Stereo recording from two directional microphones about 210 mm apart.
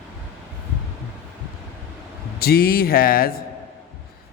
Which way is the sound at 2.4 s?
45° left (ahead or behind).